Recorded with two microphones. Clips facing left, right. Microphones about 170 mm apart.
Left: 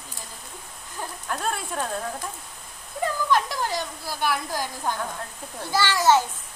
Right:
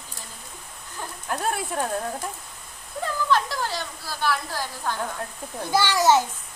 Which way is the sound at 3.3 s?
15° left (ahead or behind).